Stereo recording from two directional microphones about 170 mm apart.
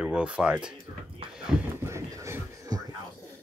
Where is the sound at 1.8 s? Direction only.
15° right (ahead or behind).